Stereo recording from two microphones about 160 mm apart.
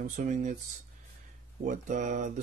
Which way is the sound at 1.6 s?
50° right (ahead or behind).